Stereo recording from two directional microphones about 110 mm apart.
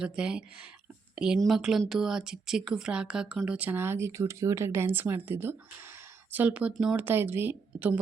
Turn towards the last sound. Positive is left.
turn(degrees=-15)  # may be behind; listen again after turning